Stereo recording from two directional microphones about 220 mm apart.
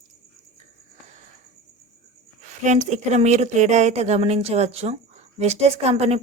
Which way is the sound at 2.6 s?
35° right (ahead or behind).